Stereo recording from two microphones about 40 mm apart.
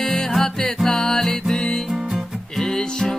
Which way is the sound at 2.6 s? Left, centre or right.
Centre.